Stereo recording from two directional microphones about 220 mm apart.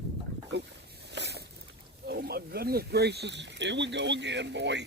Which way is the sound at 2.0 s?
45° right (ahead or behind).